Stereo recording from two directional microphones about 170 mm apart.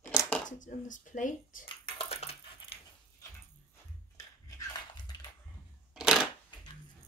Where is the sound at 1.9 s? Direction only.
35° left (ahead or behind).